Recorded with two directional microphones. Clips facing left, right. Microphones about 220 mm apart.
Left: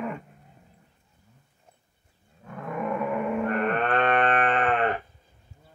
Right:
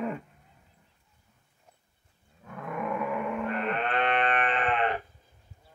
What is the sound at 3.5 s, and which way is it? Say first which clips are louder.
Sheep: left 5 dB; 55° left (ahead or behind).